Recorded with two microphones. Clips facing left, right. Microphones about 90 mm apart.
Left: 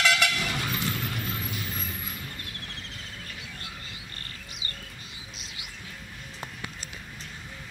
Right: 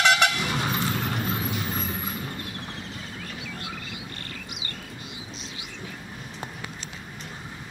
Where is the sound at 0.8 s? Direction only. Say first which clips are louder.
Right 5 dB; 35° right (ahead or behind).